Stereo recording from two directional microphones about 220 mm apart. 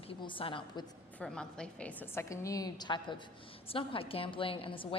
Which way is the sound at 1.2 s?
5° left (ahead or behind).